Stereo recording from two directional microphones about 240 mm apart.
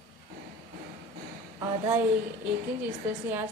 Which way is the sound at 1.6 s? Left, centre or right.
Centre.